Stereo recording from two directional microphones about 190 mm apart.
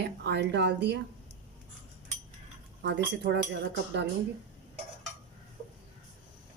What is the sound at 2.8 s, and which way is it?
Speech, 60° right (ahead or behind).